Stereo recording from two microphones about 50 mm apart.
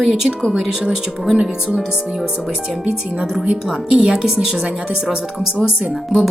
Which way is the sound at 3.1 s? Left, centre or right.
Centre.